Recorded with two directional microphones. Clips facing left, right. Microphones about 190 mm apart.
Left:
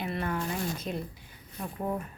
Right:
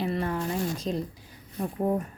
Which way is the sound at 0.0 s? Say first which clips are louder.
Right 4 dB; 35° right (ahead or behind).